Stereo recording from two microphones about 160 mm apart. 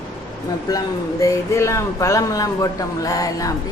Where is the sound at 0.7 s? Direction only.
20° left (ahead or behind).